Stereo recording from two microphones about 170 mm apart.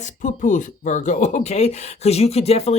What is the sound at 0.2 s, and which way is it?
Speech, 50° left (ahead or behind).